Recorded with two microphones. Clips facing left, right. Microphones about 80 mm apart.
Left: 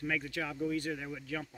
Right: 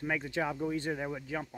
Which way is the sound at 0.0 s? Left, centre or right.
Right.